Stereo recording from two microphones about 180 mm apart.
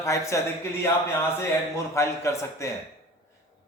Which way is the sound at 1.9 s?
15° left (ahead or behind).